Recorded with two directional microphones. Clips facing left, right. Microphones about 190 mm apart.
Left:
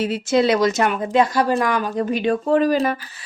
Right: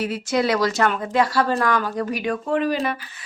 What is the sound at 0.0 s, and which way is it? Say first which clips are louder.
A woman's voice: left 4 dB; 25° left (ahead or behind).